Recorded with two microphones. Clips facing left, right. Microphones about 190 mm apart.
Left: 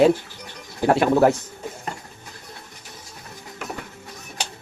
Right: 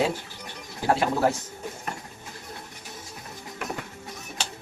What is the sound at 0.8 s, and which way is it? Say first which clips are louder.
Speech: left 6 dB; 60° left (ahead or behind).